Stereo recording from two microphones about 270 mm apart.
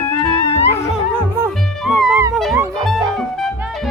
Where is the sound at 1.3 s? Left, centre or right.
Centre.